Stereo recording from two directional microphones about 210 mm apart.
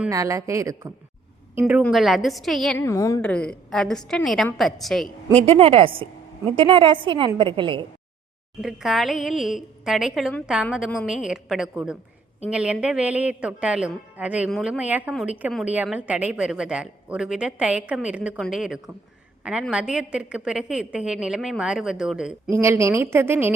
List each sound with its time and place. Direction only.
0.1 s a woman's voice: 15° right (ahead or behind); by 2.8 s centre (ahead or behind)
2.8 s a woman's voice: 15° left (ahead or behind)
5.5 s a woman's voice: 25° right (ahead or behind)
8.6 s a woman's voice: centre (ahead or behind)